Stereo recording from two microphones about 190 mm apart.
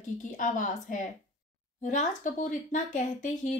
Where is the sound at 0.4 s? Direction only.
45° left (ahead or behind).